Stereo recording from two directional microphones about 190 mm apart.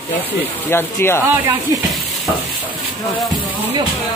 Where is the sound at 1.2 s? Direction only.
15° right (ahead or behind).